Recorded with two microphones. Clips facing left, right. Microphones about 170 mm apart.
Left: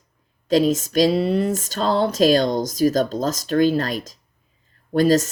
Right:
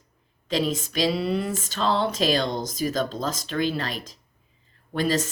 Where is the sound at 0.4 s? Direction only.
40° left (ahead or behind).